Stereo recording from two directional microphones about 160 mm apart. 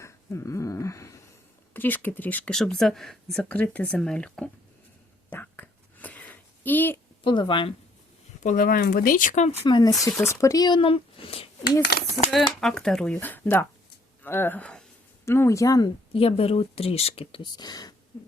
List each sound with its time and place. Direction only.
0.0 s a sound: 20° left (ahead or behind)
1.7 s speech: 10° left (ahead or behind)
5.3 s a sound: 10° left (ahead or behind)
7.3 s speech: 30° left (ahead or behind)
8.4 s speech: 60° left (ahead or behind)
9.6 s speech: 30° left (ahead or behind)
10.0 s speech: 15° left (ahead or behind); by 11.4 s 35° left (ahead or behind)
11.8 s speech: 90° left
12.5 s speech: 5° left (ahead or behind); by 15.9 s 20° left (ahead or behind)
16.1 s speech: 35° left (ahead or behind)